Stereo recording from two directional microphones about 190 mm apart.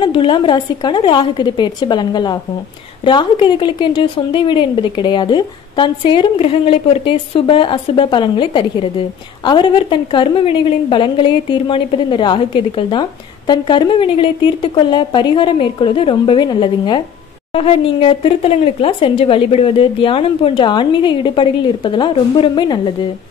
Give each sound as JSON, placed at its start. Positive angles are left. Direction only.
{"t": 0.0, "sound": "a woman's voice", "side_deg": 25}